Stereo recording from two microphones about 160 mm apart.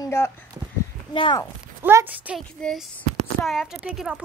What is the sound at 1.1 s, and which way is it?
Speech, 30° left (ahead or behind).